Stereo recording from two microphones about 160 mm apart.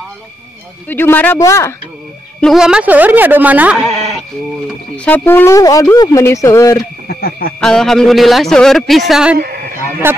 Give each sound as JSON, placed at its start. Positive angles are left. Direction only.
{"t": 0.8, "sound": "speech", "side_deg": 10}
{"t": 2.4, "sound": "speech", "side_deg": -5}
{"t": 7.1, "sound": "a sound", "side_deg": 75}
{"t": 7.6, "sound": "a man's voice", "side_deg": 5}
{"t": 9.4, "sound": "a sound", "side_deg": -70}
{"t": 10.0, "sound": "speech", "side_deg": -15}